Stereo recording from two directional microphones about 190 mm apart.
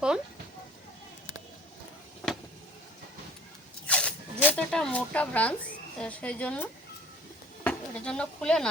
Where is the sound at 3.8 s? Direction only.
5° left (ahead or behind).